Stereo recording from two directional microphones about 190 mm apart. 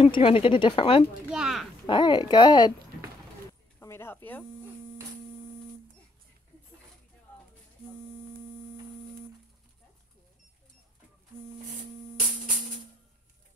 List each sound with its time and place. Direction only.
0.0 s speech: 30° left (ahead or behind)
1.3 s speech: 5° right (ahead or behind)
1.9 s speech: 25° left (ahead or behind)
3.8 s a sound: 15° left (ahead or behind)